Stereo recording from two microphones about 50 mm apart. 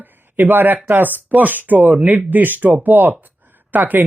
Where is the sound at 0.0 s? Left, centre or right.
Right.